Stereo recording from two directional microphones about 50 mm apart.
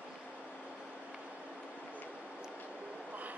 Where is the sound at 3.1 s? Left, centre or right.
Right.